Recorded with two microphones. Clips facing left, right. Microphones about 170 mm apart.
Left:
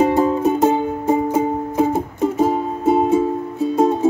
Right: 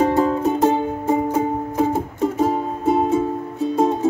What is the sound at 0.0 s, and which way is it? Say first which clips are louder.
Music: left 2 dB; 10° left (ahead or behind).